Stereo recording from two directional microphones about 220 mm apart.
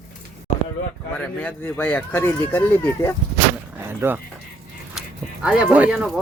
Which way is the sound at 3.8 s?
10° right (ahead or behind).